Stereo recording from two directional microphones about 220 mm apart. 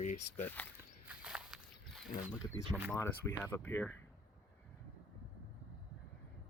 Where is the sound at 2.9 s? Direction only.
10° left (ahead or behind).